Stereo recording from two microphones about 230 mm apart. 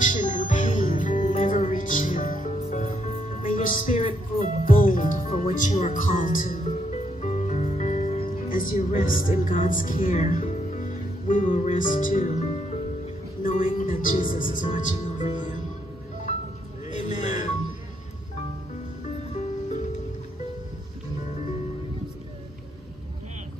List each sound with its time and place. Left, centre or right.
0.0 s music: left
14.3 s speech: left
16.9 s music: left